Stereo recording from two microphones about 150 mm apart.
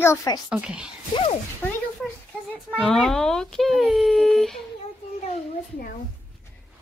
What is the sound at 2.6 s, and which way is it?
Speech, centre (ahead or behind).